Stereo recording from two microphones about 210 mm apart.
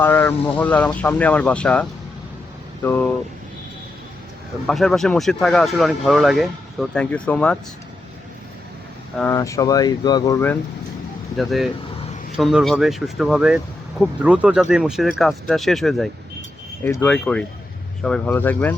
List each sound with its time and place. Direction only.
0.0 s speech: 10° left (ahead or behind)
4.6 s speech: centre (ahead or behind)
9.1 s speech: 10° left (ahead or behind)
11.3 s speech: centre (ahead or behind)